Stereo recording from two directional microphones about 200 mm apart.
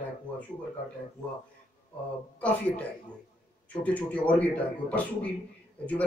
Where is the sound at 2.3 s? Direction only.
5° left (ahead or behind).